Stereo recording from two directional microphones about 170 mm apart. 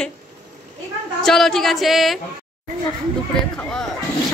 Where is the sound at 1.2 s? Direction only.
Centre (ahead or behind).